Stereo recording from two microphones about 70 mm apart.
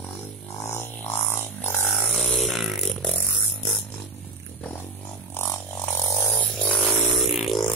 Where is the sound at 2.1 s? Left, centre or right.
Centre.